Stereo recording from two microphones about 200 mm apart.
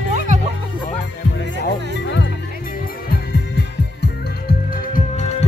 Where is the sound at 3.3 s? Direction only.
55° left (ahead or behind); by 5.4 s 35° left (ahead or behind).